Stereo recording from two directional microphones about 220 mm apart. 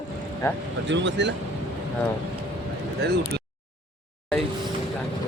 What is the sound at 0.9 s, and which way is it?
Speech, 55° right (ahead or behind).